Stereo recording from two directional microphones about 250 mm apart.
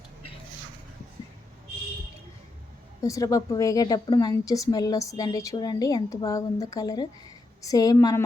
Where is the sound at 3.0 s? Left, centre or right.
Centre.